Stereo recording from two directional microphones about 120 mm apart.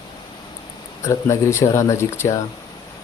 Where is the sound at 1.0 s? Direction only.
25° left (ahead or behind).